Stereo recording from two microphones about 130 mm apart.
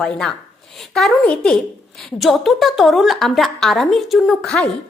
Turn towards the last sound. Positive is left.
turn(degrees=5)  # may be behind; listen again after turning